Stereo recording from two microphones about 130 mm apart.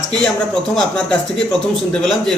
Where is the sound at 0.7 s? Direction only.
5° left (ahead or behind).